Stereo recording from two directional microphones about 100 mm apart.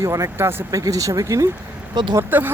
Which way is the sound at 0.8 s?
35° right (ahead or behind).